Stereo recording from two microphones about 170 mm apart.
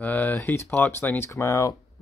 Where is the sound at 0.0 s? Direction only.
10° left (ahead or behind).